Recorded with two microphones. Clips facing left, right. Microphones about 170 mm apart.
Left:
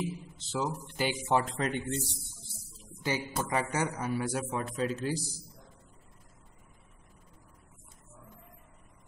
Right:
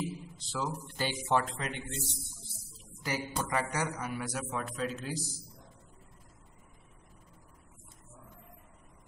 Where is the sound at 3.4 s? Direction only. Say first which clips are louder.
Left 3 dB; 25° left (ahead or behind).